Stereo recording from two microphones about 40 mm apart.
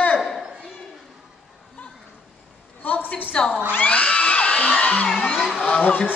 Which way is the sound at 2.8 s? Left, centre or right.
Left.